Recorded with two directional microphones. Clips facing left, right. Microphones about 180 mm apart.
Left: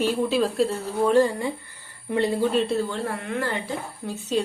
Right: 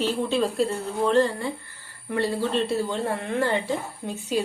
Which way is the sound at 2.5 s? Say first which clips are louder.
Left 2 dB; centre (ahead or behind).